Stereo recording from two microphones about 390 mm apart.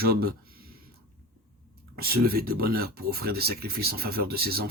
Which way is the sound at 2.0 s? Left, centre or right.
Right.